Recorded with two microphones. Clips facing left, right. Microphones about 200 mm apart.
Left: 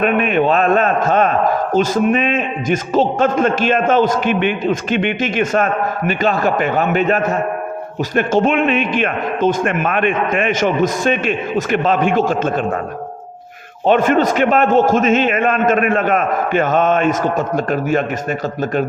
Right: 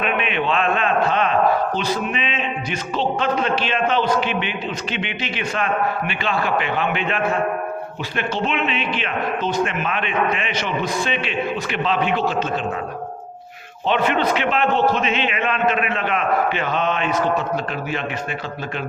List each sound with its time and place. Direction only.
0.0 s a man's voice: 45° left (ahead or behind)
13.8 s a man's voice: 45° left (ahead or behind)